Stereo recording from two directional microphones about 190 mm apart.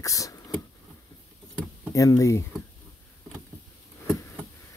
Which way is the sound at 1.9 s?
15° left (ahead or behind).